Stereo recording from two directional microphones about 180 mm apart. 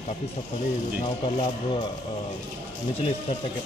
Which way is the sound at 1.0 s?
30° left (ahead or behind).